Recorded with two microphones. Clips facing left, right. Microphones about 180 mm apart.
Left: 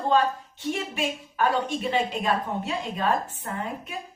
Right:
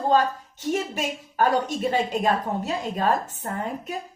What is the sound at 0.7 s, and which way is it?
A woman's voice, 40° right (ahead or behind).